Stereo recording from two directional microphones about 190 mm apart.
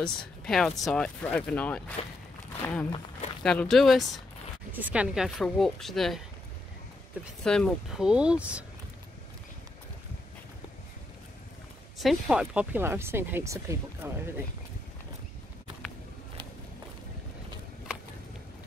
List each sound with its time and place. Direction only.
0.5 s speech: centre (ahead or behind)
2.0 s speech: 30° left (ahead or behind)
2.6 s speech: 10° left (ahead or behind)
7.4 s speech: 5° left (ahead or behind)
12.0 s speech: centre (ahead or behind)